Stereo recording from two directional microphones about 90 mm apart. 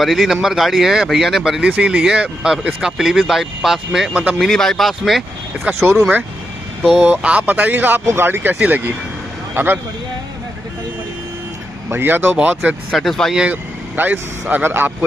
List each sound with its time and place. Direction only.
0.0 s speech: centre (ahead or behind)
5.9 s speech: 20° right (ahead or behind)
6.8 s speech: centre (ahead or behind)
7.1 s speech: 15° right (ahead or behind)
11.9 s speech: 25° right (ahead or behind)
12.9 s speech: centre (ahead or behind)
13.4 s speech: 15° right (ahead or behind)